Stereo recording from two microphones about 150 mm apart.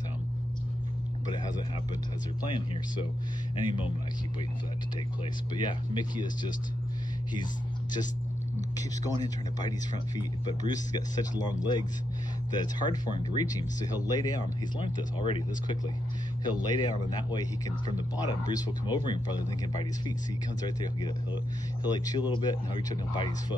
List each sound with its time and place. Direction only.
3.5 s speech: 35° left (ahead or behind)
5.5 s speech: 30° left (ahead or behind)
8.7 s speech: 25° left (ahead or behind)
21.9 s speech: 25° left (ahead or behind)